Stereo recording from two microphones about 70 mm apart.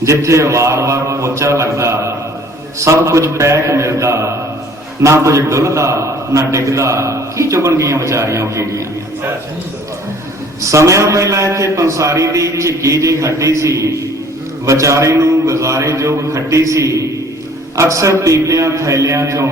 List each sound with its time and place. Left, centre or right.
0.0 s a man's voice: right
10.7 s a man's voice: right